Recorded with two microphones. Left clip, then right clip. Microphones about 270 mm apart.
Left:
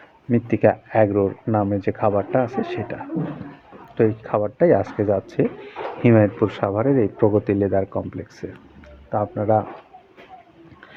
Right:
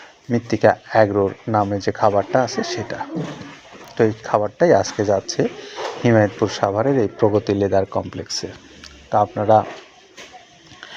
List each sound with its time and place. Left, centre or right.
0.3 s speech: centre
2.5 s speech: centre
2.7 s speech: centre